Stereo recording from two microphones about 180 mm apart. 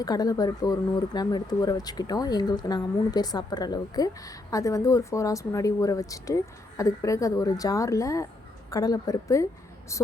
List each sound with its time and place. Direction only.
0.0 s speech: 20° left (ahead or behind)